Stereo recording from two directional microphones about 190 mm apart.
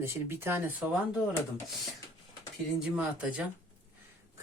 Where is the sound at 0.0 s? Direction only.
15° right (ahead or behind).